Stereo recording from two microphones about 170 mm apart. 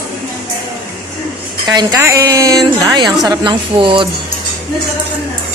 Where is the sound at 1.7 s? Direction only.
25° right (ahead or behind).